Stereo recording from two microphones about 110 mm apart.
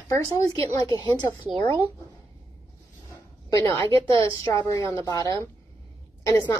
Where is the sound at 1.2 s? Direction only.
25° left (ahead or behind).